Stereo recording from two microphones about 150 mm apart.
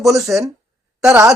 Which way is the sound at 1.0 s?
20° right (ahead or behind).